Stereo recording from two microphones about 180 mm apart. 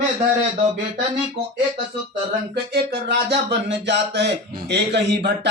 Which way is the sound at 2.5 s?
65° right (ahead or behind).